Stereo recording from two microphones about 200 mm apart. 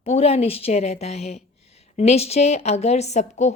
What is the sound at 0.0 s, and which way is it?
Speech, 30° left (ahead or behind).